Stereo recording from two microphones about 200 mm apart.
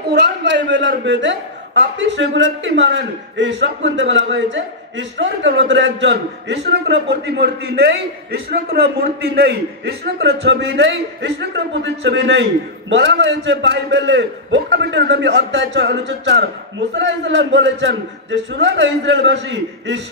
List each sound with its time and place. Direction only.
0.1 s a man's voice: 60° right (ahead or behind)